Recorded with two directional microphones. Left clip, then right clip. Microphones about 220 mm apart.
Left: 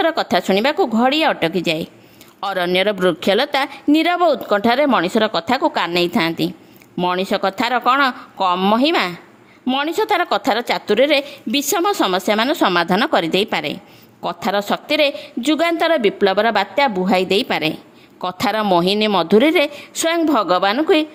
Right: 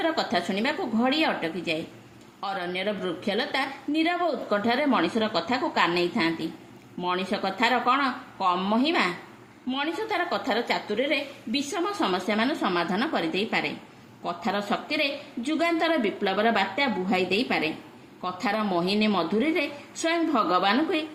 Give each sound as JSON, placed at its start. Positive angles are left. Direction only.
{"t": 0.0, "sound": "a woman's voice", "side_deg": 50}